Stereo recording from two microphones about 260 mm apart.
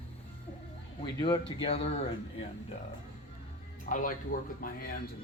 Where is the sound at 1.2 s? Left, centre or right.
Centre.